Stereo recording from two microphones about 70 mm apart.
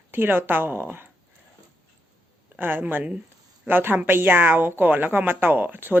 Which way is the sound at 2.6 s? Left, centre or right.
Right.